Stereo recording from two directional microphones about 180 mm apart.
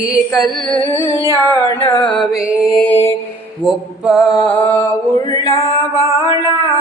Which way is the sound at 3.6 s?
Centre (ahead or behind).